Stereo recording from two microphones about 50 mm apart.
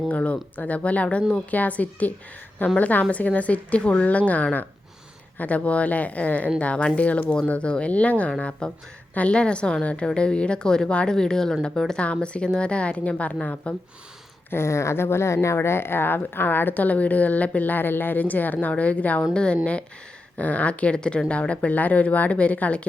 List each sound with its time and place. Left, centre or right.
0.1 s speech: left
14.5 s speech: left
19.3 s speech: centre
20.3 s speech: left